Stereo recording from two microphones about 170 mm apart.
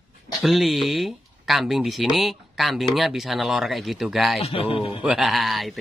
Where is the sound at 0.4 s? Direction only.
Centre (ahead or behind).